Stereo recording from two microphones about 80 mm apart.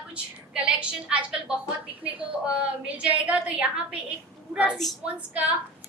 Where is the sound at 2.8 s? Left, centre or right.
Centre.